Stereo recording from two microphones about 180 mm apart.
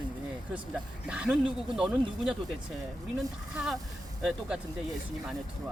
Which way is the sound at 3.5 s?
5° right (ahead or behind).